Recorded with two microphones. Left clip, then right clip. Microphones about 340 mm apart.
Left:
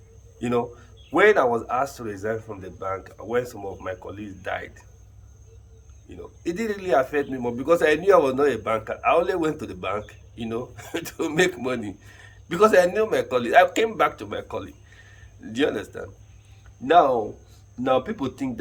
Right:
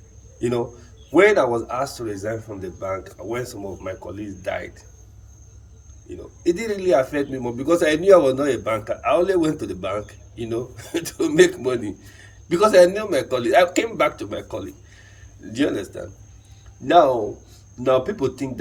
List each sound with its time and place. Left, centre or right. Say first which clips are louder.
0.3 s a man's voice: right 1 dB; centre
6.1 s speech: right 8 dB; centre